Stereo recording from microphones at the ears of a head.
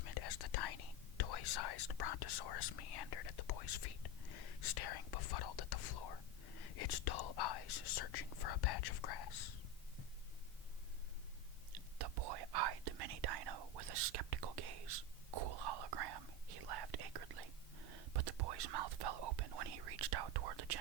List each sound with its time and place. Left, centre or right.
0.0 s speech: left
11.7 s whispering: right